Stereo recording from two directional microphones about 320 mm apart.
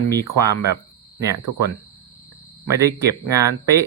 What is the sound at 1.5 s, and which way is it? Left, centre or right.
Speech, right.